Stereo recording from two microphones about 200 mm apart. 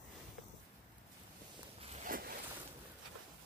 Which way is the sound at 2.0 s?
45° right (ahead or behind).